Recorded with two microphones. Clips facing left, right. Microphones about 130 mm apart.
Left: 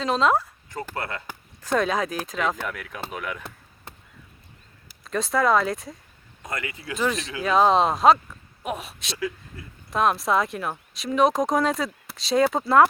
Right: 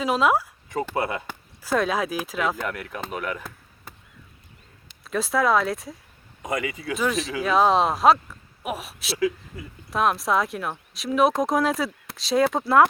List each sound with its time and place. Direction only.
0.0 s speech: 10° right (ahead or behind)
0.9 s speech: 20° right (ahead or behind)
1.6 s speech: 5° right (ahead or behind)
5.0 s speech: centre (ahead or behind)